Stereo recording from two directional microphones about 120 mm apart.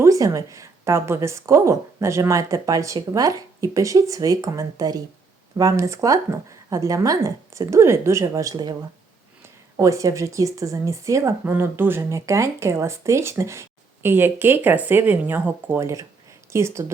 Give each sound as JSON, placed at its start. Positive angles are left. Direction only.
{"t": 0.0, "sound": "speech", "side_deg": -25}
{"t": 9.7, "sound": "speech", "side_deg": -25}